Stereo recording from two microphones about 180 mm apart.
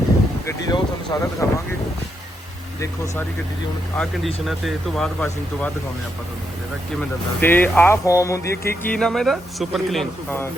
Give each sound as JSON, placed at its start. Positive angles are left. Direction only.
{"t": 0.4, "sound": "speech", "side_deg": 20}
{"t": 3.9, "sound": "speech", "side_deg": 5}
{"t": 7.0, "sound": "speech", "side_deg": 10}